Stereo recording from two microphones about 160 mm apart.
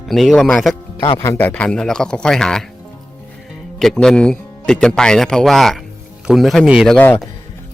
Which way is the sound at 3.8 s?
5° left (ahead or behind).